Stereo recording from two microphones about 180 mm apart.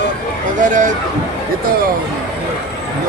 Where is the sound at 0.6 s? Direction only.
45° right (ahead or behind).